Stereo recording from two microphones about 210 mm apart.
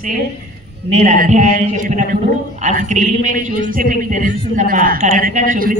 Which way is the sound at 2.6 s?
35° right (ahead or behind).